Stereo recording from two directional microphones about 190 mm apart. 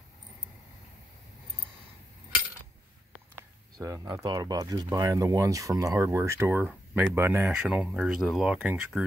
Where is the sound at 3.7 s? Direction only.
15° right (ahead or behind).